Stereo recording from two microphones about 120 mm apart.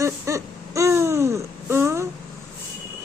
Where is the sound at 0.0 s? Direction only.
25° right (ahead or behind).